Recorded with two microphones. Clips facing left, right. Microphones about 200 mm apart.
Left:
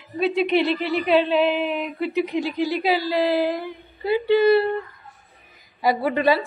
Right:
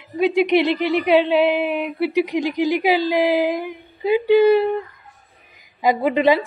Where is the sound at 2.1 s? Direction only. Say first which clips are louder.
Right 2 dB; 15° right (ahead or behind).